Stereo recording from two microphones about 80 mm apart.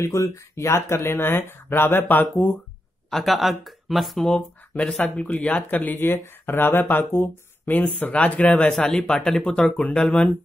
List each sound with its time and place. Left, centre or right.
0.0 s speech: left
3.1 s speech: centre
4.3 s speech: centre